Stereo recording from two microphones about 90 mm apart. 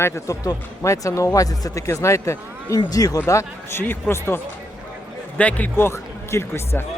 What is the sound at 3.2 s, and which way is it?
Speech, 30° left (ahead or behind).